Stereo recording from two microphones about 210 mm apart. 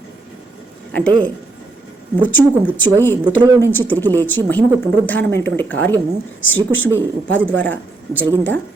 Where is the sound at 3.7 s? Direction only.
10° left (ahead or behind).